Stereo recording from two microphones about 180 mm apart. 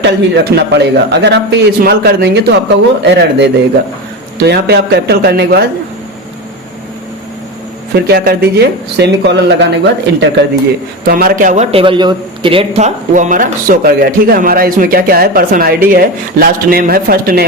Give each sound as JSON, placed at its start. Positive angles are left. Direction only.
{"t": 0.0, "sound": "a man's voice", "side_deg": -65}
{"t": 7.9, "sound": "speech", "side_deg": -60}
{"t": 11.0, "sound": "a man's voice", "side_deg": -55}